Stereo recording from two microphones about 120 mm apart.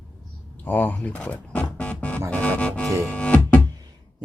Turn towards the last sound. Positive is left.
turn(degrees=-35)  # may be behind; listen again after turning